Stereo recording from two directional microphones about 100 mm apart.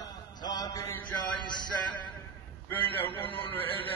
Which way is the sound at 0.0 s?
40° left (ahead or behind).